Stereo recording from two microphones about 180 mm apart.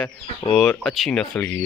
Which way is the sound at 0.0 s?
5° left (ahead or behind).